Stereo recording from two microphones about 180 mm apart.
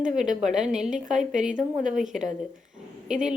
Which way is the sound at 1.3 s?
45° right (ahead or behind).